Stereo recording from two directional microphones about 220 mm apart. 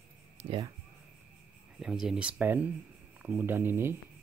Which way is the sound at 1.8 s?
5° right (ahead or behind).